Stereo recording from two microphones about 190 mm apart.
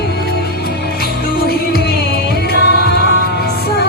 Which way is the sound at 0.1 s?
55° left (ahead or behind).